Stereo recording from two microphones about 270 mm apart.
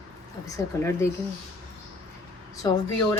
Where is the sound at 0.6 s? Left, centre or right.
Centre.